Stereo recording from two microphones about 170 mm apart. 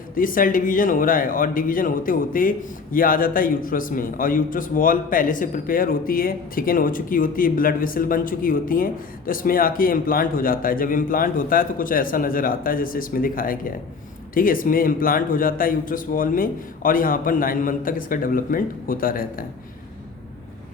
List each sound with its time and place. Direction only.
0.1 s a man's voice: 55° left (ahead or behind)